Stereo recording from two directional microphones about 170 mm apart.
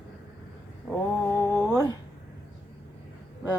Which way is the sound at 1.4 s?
15° left (ahead or behind).